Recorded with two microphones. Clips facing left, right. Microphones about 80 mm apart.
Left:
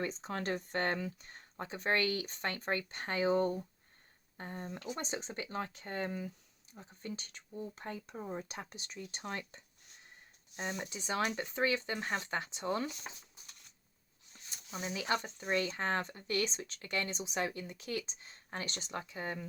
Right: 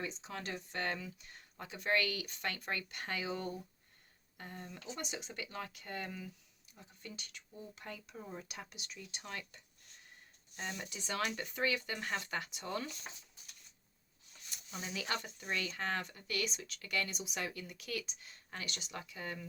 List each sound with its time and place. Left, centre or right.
0.0 s speech: left
10.6 s speech: left
14.5 s speech: centre